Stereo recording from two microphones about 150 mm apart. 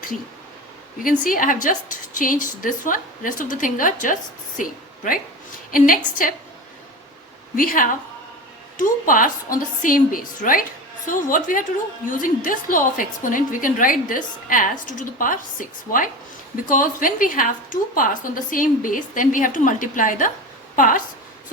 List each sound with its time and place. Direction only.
1.2 s a woman's voice: 65° left (ahead or behind)
7.5 s a woman's voice: 70° left (ahead or behind)